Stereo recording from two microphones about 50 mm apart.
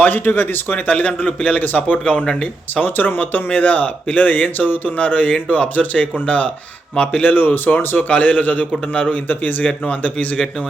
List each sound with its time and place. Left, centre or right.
0.0 s a man's voice: left
2.2 s a man's voice: centre
2.8 s a man's voice: left
7.3 s speech: left